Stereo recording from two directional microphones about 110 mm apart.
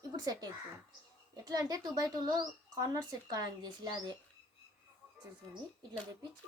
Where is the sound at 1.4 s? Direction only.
35° right (ahead or behind).